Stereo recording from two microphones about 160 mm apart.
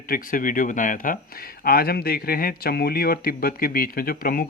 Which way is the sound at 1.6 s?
70° left (ahead or behind).